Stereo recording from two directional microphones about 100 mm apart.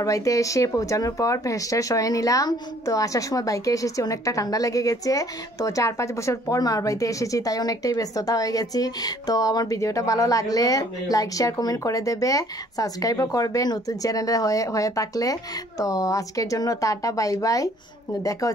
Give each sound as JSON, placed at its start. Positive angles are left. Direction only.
{"t": 0.0, "sound": "speech", "side_deg": 35}